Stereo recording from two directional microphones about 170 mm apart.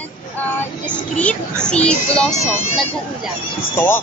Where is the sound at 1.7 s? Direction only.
5° left (ahead or behind).